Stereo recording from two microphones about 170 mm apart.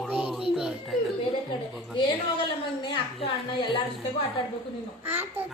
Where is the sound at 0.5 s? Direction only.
5° right (ahead or behind).